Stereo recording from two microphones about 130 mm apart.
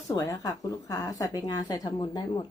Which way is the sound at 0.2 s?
25° left (ahead or behind).